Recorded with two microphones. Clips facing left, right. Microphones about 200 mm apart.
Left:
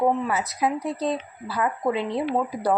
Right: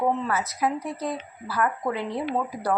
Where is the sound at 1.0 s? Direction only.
20° left (ahead or behind).